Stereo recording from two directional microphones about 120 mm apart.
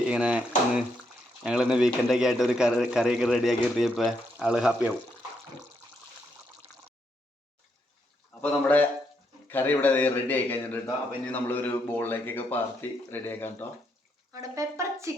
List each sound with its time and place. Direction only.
0.1 s a man's voice: 10° right (ahead or behind)
8.3 s a man's voice: 10° left (ahead or behind)
14.3 s speech: 30° right (ahead or behind)